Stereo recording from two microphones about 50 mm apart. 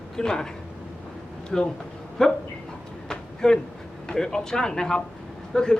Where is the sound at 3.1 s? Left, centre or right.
Centre.